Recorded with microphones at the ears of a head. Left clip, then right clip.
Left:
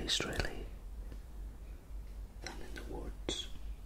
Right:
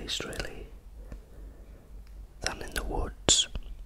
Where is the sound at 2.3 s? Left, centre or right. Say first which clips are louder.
Right 13 dB; right.